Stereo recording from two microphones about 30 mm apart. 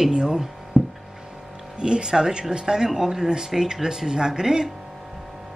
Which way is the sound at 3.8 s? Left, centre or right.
Centre.